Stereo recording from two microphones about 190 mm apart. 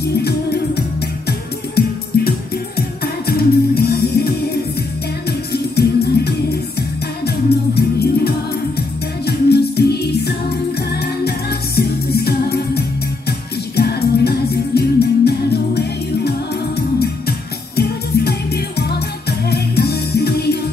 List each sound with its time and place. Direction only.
0.2 s music: 60° left (ahead or behind)
5.5 s music: 60° left (ahead or behind)